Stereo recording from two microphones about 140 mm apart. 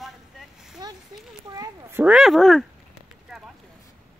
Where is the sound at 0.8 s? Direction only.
30° right (ahead or behind).